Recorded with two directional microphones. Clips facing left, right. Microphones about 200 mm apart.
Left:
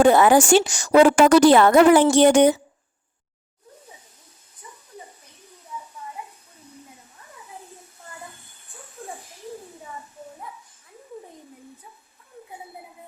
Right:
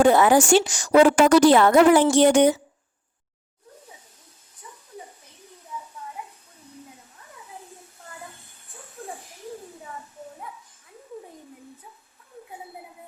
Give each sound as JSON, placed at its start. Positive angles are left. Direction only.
{"t": 0.0, "sound": "a woman's voice", "side_deg": 70}